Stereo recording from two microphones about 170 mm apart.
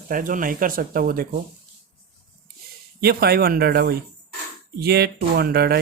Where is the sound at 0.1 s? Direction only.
55° right (ahead or behind).